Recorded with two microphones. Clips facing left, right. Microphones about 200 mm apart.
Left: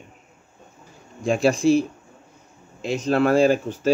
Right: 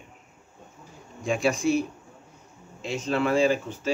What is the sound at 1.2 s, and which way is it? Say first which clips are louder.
Speech: left 6 dB; 30° left (ahead or behind).